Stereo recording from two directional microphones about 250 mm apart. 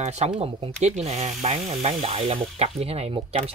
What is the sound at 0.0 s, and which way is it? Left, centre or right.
Speech, right.